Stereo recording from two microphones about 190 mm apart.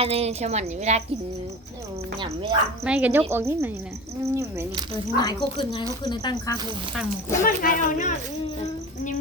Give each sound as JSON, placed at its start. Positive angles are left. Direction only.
{"t": 0.0, "sound": "a woman's voice", "side_deg": -30}
{"t": 2.1, "sound": "speech", "side_deg": -25}
{"t": 2.8, "sound": "speech", "side_deg": -5}
{"t": 5.1, "sound": "speech", "side_deg": 20}
{"t": 7.4, "sound": "speech", "side_deg": 45}